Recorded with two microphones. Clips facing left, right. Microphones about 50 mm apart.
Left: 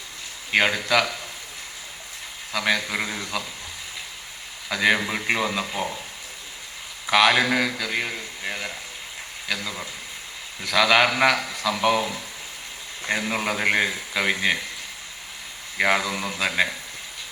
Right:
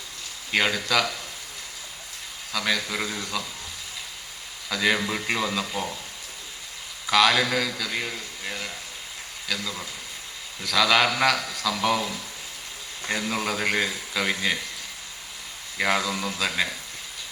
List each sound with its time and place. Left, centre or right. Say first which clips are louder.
0.5 s a man's voice: left 3 dB; left
2.5 s a man's voice: left 3 dB; left
4.7 s a man's voice: left 3 dB; left
7.1 s a man's voice: left 2 dB; left
13.1 s a man's voice: left 2 dB; left
15.8 s a man's voice: left 2 dB; left